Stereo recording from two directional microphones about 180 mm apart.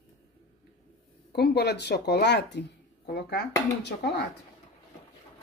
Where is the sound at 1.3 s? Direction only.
65° left (ahead or behind).